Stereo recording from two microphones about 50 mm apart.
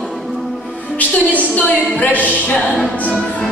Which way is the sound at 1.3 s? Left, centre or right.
Left.